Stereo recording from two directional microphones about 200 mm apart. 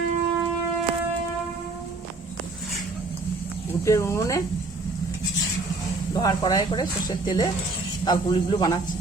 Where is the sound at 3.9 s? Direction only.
15° left (ahead or behind).